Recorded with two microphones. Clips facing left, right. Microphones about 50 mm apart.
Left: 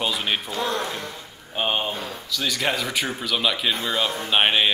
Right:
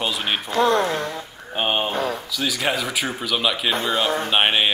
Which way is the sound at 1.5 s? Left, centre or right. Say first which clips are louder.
Right 2 dB; centre.